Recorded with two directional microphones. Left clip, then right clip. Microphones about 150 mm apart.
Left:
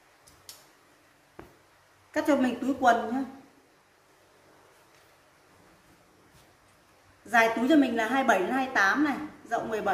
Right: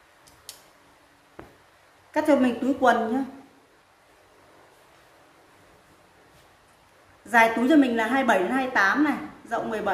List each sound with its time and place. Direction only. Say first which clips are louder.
0.5 s tick-tock: right 4 dB; 35° right (ahead or behind)
1.4 s a sound: right 4 dB; 5° left (ahead or behind)
2.1 s a woman's voice: right 5 dB; 5° right (ahead or behind)
7.2 s a woman's voice: right 4 dB; centre (ahead or behind)